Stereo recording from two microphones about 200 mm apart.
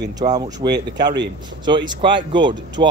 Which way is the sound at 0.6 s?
25° right (ahead or behind).